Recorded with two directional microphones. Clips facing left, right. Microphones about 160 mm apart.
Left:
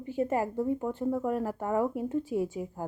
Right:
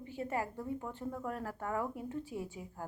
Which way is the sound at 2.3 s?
75° left (ahead or behind).